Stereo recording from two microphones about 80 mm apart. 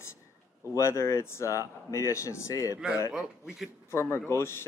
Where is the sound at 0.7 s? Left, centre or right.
Left.